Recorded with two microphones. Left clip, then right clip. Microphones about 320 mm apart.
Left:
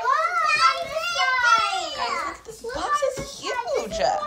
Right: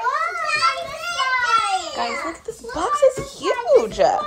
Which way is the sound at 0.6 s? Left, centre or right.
Centre.